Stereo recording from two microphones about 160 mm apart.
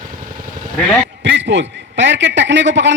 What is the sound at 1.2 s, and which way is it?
A man's voice, 90° right.